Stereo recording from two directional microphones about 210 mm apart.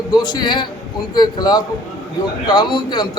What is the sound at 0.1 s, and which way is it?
A man's voice, 20° left (ahead or behind).